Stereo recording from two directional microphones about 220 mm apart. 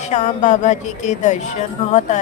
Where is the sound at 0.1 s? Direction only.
35° left (ahead or behind).